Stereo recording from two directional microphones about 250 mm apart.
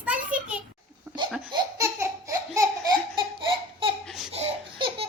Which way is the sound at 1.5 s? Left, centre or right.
Centre.